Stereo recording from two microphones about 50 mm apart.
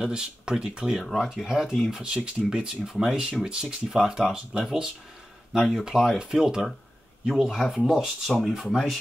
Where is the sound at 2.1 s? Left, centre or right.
Centre.